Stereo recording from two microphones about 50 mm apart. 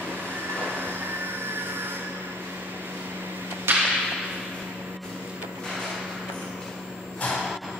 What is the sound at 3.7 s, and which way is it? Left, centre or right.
Whip, right.